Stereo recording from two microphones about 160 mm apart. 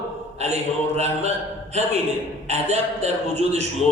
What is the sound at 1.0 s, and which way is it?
A man's voice, 45° right (ahead or behind).